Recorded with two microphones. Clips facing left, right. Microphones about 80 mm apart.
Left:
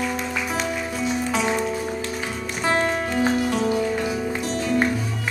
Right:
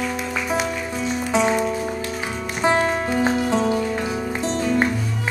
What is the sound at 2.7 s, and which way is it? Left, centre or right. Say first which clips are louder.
Music: right 2 dB; centre.